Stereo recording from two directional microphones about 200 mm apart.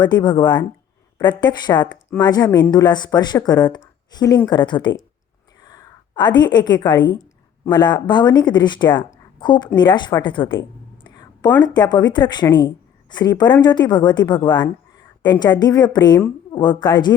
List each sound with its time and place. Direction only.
0.0 s a woman's voice: 20° left (ahead or behind)
11.0 s a sound: 20° left (ahead or behind)
11.6 s a woman's voice: 20° left (ahead or behind)